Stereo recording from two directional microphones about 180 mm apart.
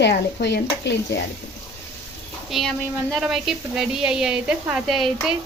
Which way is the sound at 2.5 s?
Centre (ahead or behind).